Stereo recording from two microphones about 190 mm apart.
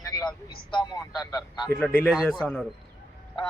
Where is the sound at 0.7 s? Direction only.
20° left (ahead or behind).